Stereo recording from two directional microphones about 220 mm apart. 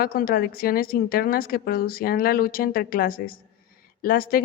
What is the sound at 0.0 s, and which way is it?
A woman's voice, 40° left (ahead or behind).